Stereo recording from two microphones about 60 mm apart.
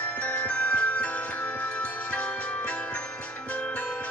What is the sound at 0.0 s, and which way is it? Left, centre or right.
Wind chime, left.